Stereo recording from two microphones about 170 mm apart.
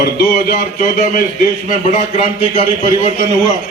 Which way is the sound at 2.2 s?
35° left (ahead or behind).